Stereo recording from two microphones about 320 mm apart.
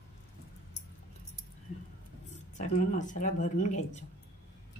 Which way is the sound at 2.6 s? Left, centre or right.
Left.